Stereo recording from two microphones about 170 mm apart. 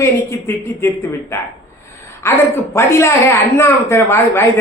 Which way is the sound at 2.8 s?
15° left (ahead or behind).